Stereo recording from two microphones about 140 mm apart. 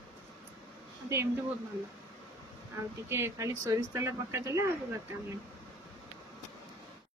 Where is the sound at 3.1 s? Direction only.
20° right (ahead or behind).